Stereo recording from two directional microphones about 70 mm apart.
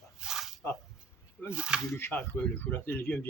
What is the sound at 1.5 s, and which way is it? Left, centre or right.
Speech, centre.